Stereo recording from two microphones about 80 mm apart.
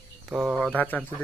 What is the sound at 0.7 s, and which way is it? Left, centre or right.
Speech, left.